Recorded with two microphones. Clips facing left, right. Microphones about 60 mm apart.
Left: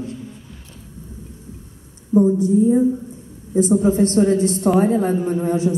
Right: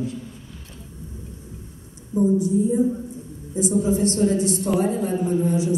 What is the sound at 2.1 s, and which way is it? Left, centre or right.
A woman's voice, left.